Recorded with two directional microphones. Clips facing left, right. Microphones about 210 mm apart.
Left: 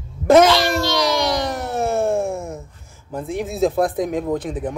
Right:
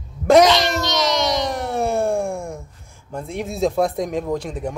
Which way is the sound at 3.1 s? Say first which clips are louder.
Left 3 dB; centre (ahead or behind).